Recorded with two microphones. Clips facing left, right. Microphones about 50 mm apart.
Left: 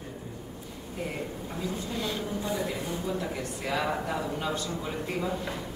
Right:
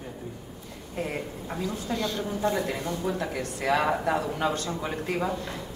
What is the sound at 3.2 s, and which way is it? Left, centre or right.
A man's voice, right.